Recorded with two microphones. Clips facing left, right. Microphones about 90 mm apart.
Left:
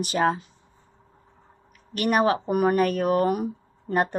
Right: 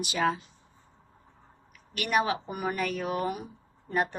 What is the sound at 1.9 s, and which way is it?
Speech, 40° left (ahead or behind).